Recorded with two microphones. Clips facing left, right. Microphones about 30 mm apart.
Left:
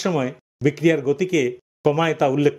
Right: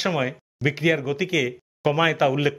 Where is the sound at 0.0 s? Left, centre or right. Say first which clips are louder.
Left 2 dB; right.